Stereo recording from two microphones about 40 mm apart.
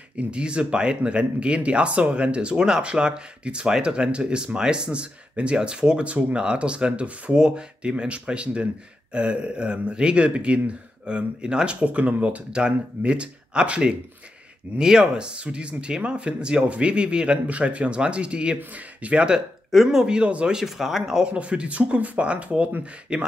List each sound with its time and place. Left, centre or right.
0.3 s speech: right
12.5 s speech: right
19.7 s speech: centre
20.0 s speech: right
20.6 s speech: centre
21.3 s speech: right
23.1 s speech: right